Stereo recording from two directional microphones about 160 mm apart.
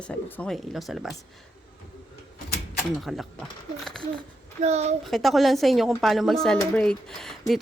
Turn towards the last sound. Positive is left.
turn(degrees=0)  # may be behind; listen again after turning